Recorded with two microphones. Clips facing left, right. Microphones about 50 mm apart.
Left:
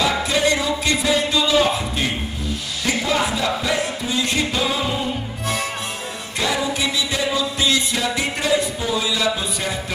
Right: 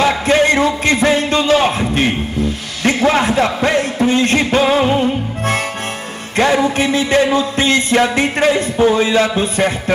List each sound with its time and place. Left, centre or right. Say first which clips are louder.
0.0 s music: right 6 dB; right
6.3 s music: right 9 dB; right